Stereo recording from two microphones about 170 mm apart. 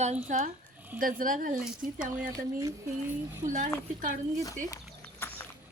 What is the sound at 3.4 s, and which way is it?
Speech, 50° right (ahead or behind).